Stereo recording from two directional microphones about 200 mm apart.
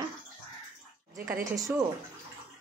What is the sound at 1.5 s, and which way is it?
Speech, 15° right (ahead or behind).